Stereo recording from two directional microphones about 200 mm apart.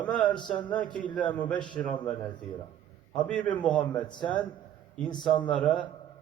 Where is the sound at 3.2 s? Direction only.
5° left (ahead or behind).